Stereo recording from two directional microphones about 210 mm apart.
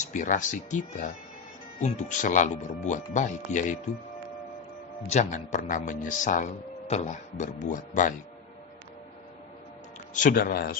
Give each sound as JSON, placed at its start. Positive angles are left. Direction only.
{"t": 0.0, "sound": "speech", "side_deg": 35}
{"t": 5.0, "sound": "speech", "side_deg": 35}
{"t": 10.1, "sound": "a man's voice", "side_deg": 40}